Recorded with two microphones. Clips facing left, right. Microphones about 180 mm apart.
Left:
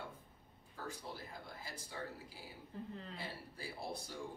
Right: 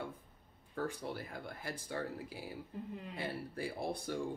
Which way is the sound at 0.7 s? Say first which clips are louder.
Right 8 dB; 60° right (ahead or behind).